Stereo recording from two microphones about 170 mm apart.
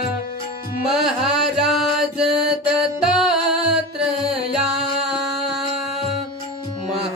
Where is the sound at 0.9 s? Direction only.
Centre (ahead or behind).